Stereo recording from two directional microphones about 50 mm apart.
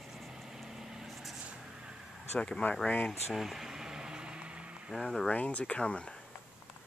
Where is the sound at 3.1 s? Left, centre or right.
Centre; by 4.9 s right.